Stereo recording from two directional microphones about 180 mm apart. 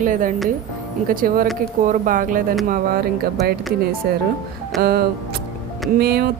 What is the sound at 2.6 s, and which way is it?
A woman's voice, 55° right (ahead or behind).